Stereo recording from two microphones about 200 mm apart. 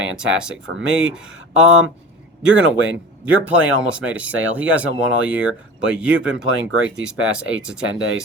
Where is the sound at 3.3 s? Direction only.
5° right (ahead or behind).